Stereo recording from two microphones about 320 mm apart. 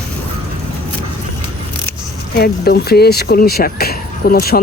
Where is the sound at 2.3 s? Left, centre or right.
Left.